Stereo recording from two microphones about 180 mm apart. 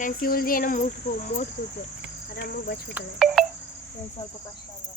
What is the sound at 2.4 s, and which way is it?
Cricket, 60° left (ahead or behind).